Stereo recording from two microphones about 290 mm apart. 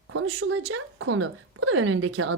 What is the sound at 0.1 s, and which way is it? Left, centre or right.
A woman's voice, right.